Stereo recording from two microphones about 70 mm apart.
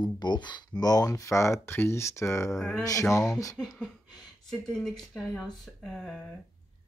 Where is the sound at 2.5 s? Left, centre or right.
Centre.